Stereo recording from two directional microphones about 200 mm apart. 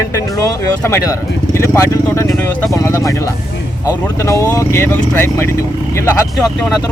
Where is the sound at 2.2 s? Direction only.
Centre (ahead or behind).